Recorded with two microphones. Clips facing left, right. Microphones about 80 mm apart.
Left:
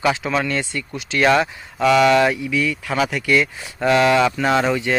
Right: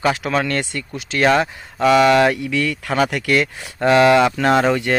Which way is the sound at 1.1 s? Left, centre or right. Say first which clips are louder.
Even; right.